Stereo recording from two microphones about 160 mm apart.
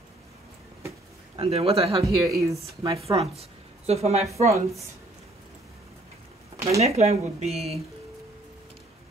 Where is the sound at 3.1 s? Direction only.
40° right (ahead or behind).